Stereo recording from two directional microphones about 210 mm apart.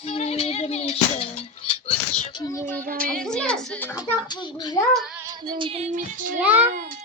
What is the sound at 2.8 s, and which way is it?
Speech, 40° right (ahead or behind).